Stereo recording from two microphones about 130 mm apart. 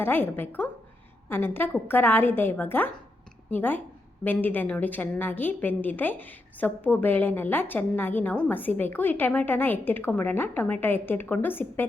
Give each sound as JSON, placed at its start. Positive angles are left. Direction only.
{"t": 0.0, "sound": "a woman's voice", "side_deg": 15}